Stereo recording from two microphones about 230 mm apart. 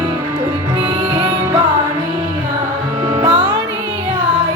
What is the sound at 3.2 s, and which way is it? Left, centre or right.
Music, right.